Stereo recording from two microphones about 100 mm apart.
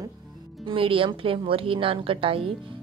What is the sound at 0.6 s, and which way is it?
Speech, 60° right (ahead or behind).